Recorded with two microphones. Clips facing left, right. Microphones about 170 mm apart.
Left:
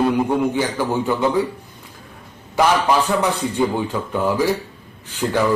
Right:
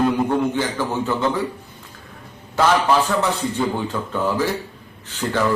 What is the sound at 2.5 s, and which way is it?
A man's voice, 15° left (ahead or behind).